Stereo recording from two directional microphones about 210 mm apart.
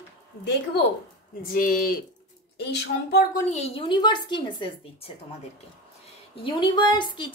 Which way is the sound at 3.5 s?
30° left (ahead or behind).